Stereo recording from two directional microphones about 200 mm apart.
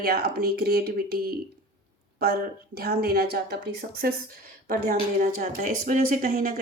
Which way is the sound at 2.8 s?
50° right (ahead or behind).